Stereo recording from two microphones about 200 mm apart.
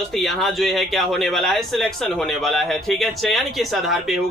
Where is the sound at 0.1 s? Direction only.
Centre (ahead or behind).